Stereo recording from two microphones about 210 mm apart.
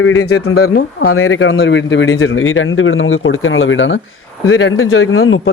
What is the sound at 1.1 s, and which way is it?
A man's voice, 75° left (ahead or behind).